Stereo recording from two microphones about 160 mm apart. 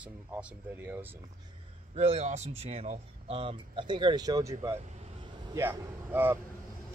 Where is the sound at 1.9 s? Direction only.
40° right (ahead or behind); by 6.4 s 15° right (ahead or behind).